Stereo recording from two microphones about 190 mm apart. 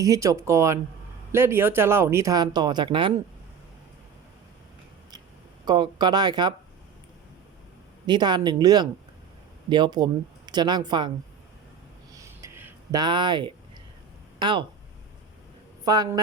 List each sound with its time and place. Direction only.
0.0 s speech: 20° right (ahead or behind)
5.6 s speech: 25° right (ahead or behind)
8.0 s speech: 25° right (ahead or behind)
12.1 s a sound: 15° right (ahead or behind)
13.0 s speech: 25° right (ahead or behind)
15.8 s a woman's voice: 20° right (ahead or behind)